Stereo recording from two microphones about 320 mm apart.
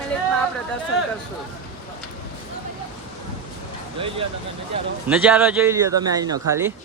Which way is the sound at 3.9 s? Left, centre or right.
Centre.